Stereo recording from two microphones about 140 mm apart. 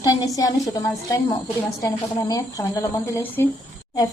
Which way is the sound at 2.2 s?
25° left (ahead or behind).